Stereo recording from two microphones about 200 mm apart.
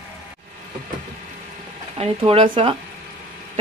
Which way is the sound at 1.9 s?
30° right (ahead or behind).